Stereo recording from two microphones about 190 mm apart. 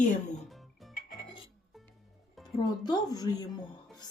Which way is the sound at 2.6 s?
20° left (ahead or behind).